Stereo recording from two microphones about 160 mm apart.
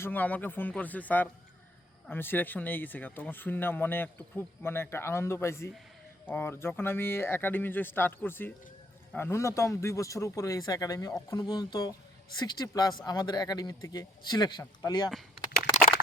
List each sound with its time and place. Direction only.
0.0 s speech: 10° left (ahead or behind)